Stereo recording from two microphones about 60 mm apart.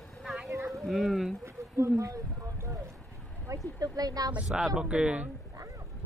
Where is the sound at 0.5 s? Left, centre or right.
Right.